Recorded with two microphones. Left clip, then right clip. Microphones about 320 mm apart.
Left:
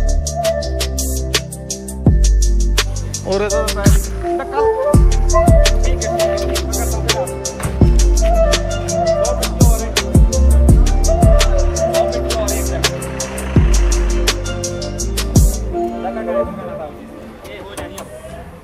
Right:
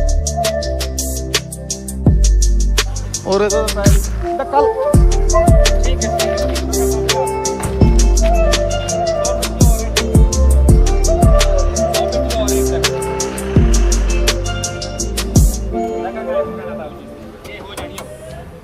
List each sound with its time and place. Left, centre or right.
0.0 s music: centre
4.4 s music: right
4.9 s music: centre